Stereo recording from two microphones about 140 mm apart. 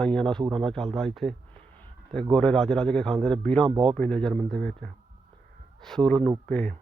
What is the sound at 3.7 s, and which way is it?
Speech, 40° right (ahead or behind).